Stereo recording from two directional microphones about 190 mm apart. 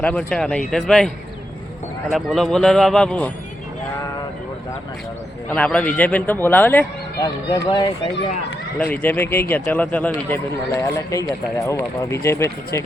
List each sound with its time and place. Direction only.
0.0 s speech: 5° left (ahead or behind)
2.1 s speech: centre (ahead or behind)
5.5 s a man's voice: 5° left (ahead or behind)
7.2 s speech: 20° left (ahead or behind)
8.0 s speech: 70° left (ahead or behind)
8.8 s a man's voice: 10° left (ahead or behind)